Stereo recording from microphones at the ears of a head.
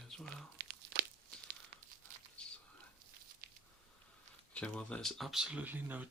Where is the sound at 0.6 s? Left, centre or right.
Right.